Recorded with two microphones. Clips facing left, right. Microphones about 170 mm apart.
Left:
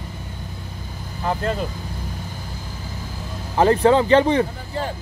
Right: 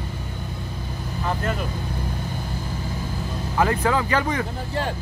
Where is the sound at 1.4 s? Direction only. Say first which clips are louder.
Left 4 dB; 30° left (ahead or behind).